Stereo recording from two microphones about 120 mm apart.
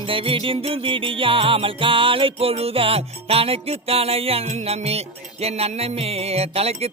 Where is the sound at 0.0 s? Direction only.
50° right (ahead or behind).